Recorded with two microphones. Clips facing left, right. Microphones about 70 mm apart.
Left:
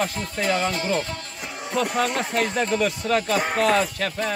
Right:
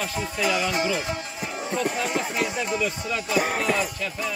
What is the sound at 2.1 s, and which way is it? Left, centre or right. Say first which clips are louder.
Speech: left 3 dB; left.